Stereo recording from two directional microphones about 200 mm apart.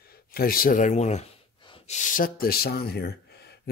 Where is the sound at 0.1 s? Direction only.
50° left (ahead or behind); by 2.0 s 25° left (ahead or behind).